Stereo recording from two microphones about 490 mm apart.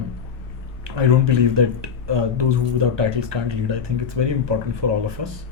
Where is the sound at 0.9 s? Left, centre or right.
Right.